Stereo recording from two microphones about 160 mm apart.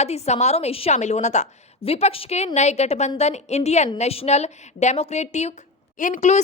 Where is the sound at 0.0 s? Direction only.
45° left (ahead or behind).